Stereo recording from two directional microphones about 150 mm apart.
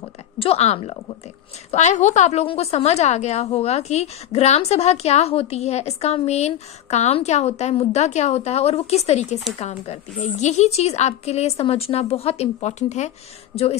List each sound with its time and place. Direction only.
0.4 s a woman's voice: 45° left (ahead or behind)